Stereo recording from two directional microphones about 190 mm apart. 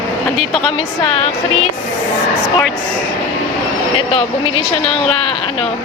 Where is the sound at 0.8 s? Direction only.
30° left (ahead or behind).